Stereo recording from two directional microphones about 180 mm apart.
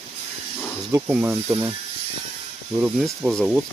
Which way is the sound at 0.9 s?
10° right (ahead or behind).